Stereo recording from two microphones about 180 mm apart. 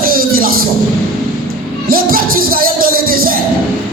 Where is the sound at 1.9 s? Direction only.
55° right (ahead or behind).